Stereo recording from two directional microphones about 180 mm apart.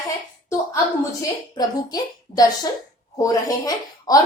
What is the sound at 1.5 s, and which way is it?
A woman's voice, 20° left (ahead or behind).